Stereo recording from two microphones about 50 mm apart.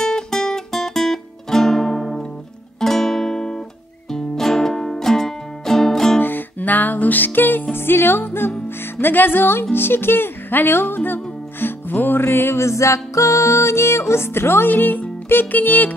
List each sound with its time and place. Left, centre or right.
0.0 s music: centre
6.2 s music: left
7.7 s speech: left
11.6 s music: left
12.3 s music: left
12.6 s music: left
14.7 s music: left